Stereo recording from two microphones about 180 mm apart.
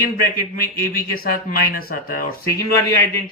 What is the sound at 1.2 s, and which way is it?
Speech, 55° left (ahead or behind).